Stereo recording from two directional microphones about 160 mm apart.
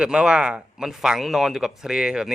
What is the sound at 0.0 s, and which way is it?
Speech, 5° right (ahead or behind).